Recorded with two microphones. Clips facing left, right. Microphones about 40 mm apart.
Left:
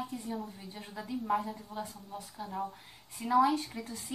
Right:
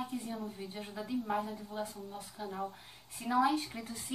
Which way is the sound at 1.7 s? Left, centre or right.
Centre.